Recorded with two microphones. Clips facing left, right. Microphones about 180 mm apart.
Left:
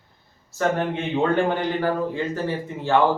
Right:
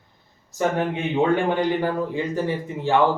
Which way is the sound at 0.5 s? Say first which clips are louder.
Even; 15° right (ahead or behind).